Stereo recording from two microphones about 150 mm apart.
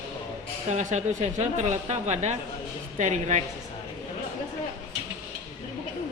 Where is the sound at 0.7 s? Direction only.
50° right (ahead or behind).